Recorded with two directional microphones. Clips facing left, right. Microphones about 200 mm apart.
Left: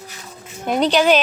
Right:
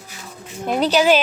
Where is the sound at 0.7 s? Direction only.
5° right (ahead or behind).